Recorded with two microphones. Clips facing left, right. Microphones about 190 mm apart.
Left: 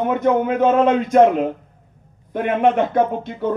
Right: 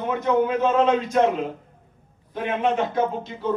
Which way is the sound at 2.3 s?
55° left (ahead or behind).